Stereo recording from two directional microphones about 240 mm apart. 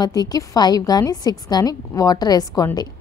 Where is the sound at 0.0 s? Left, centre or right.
Centre.